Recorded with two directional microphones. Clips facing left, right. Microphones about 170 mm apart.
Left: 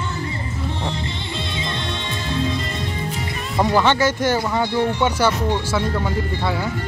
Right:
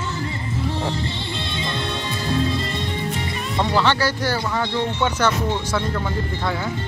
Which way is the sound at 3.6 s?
15° left (ahead or behind).